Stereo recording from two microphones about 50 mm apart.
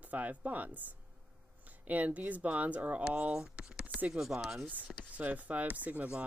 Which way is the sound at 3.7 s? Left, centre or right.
Right.